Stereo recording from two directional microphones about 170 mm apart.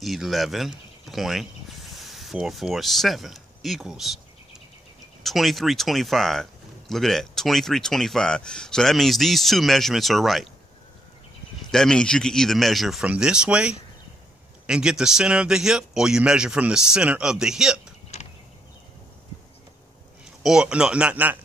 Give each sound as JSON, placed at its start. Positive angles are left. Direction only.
{"t": 0.0, "sound": "speech", "side_deg": 0}
{"t": 5.2, "sound": "speech", "side_deg": 0}
{"t": 11.7, "sound": "speech", "side_deg": 5}
{"t": 18.1, "sound": "a sound", "side_deg": 40}
{"t": 20.4, "sound": "speech", "side_deg": -5}